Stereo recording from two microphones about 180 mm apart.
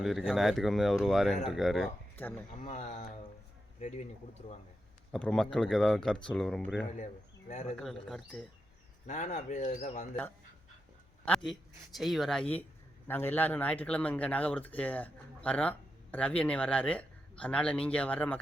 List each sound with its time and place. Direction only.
0.0 s speech: centre (ahead or behind)
2.6 s speech: 40° left (ahead or behind)
5.1 s speech: 5° left (ahead or behind)
6.9 s speech: 45° left (ahead or behind)
7.8 s speech: centre (ahead or behind)
9.0 s speech: 40° left (ahead or behind)
11.9 s speech: centre (ahead or behind)